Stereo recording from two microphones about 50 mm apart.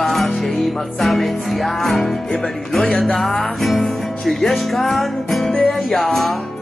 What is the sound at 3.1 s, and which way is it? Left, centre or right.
Music, centre.